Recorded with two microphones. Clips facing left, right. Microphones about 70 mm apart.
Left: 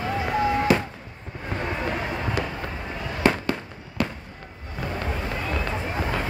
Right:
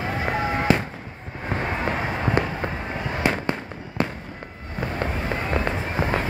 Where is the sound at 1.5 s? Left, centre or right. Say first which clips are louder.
Right 2 dB; right.